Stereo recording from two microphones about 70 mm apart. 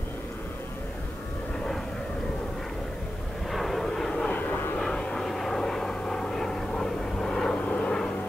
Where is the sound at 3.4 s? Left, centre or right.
Centre.